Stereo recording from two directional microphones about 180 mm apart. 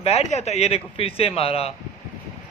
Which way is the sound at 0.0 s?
35° left (ahead or behind).